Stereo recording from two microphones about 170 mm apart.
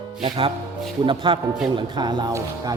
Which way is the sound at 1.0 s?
30° right (ahead or behind).